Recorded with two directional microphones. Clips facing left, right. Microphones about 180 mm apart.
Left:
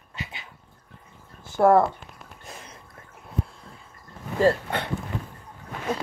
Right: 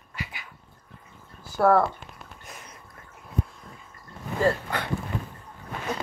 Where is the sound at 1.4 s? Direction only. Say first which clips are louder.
Left 2 dB; 25° left (ahead or behind).